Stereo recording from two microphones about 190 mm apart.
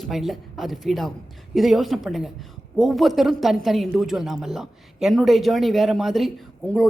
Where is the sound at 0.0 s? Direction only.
Centre (ahead or behind).